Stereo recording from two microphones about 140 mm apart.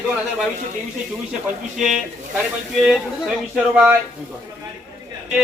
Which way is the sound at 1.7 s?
Centre (ahead or behind).